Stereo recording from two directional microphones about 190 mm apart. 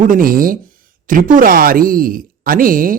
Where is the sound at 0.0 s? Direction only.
45° right (ahead or behind).